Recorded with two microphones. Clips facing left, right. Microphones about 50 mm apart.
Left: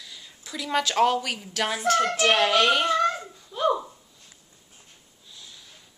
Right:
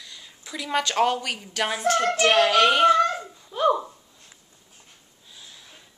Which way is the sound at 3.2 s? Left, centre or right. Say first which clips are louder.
Right 3 dB; centre.